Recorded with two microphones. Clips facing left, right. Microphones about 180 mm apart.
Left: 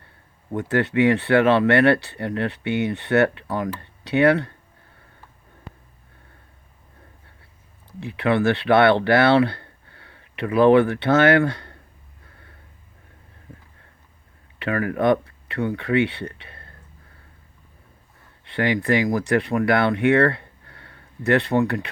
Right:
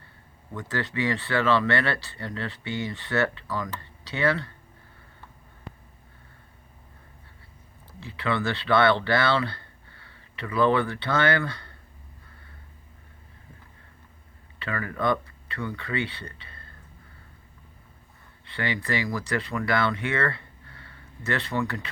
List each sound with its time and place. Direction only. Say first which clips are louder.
0.5 s speech: left 9 dB; 60° left (ahead or behind)
7.9 s speech: left 7 dB; 65° left (ahead or behind)
14.6 s speech: left 7 dB; 65° left (ahead or behind)
18.4 s speech: left 9 dB; 65° left (ahead or behind)